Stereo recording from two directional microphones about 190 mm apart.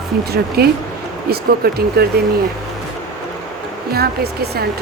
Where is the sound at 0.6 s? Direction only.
55° right (ahead or behind).